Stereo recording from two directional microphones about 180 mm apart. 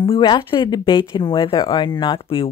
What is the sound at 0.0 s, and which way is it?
Speech, 30° left (ahead or behind).